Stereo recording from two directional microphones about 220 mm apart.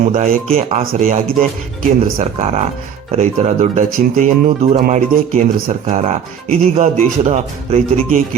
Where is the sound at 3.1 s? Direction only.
30° right (ahead or behind).